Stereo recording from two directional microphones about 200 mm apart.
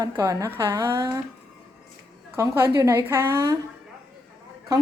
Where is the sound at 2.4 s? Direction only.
15° right (ahead or behind).